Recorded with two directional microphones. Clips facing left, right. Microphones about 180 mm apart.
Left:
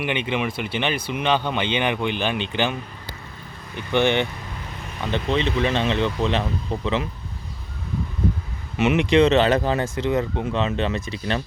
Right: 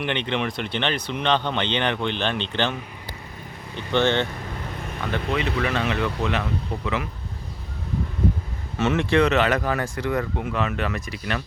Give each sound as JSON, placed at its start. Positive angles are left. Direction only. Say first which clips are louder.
{"t": 0.0, "sound": "speech", "louder": "left 1 dB", "side_deg": 5}
{"t": 3.8, "sound": "speech", "louder": "left 1 dB", "side_deg": 15}
{"t": 5.1, "sound": "speech", "louder": "left 3 dB", "side_deg": 25}
{"t": 8.8, "sound": "speech", "louder": "left 3 dB", "side_deg": 15}